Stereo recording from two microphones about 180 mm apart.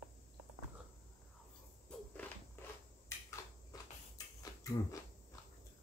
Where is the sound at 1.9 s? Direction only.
5° left (ahead or behind).